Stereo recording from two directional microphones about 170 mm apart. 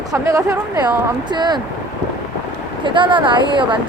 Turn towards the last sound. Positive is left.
turn(degrees=-30)  # may be behind; listen again after turning